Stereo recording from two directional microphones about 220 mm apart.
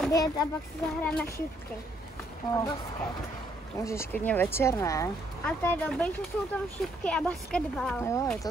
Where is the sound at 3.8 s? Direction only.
15° left (ahead or behind).